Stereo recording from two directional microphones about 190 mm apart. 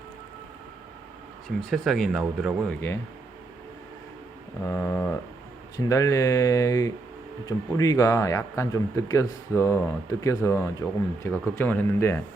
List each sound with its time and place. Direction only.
1.7 s speech: centre (ahead or behind)
4.7 s a sound: 10° left (ahead or behind)
5.7 s speech: 15° left (ahead or behind)